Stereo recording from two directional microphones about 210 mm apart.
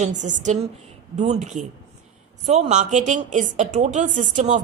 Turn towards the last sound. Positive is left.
turn(degrees=-35)  # may be behind; listen again after turning